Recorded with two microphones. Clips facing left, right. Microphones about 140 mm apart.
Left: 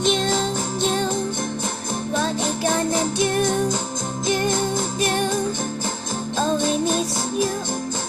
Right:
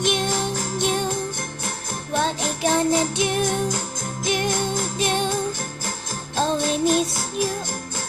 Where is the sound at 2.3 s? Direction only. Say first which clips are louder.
Even; 20° left (ahead or behind).